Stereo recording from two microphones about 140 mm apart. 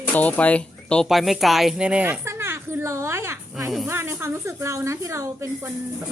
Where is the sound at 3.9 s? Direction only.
15° right (ahead or behind).